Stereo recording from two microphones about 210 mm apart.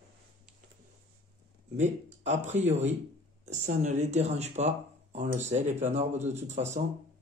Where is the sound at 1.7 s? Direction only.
35° right (ahead or behind).